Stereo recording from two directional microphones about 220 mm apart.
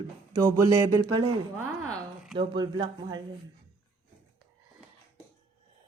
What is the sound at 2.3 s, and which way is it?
Speech, 20° right (ahead or behind).